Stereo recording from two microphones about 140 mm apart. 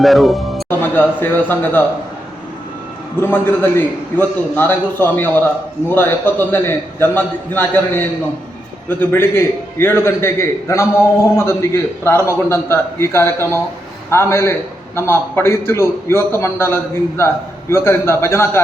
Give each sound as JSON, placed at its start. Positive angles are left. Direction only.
{"t": 0.0, "sound": "speech", "side_deg": 0}
{"t": 0.7, "sound": "a man's voice", "side_deg": 15}
{"t": 3.2, "sound": "a man's voice", "side_deg": 15}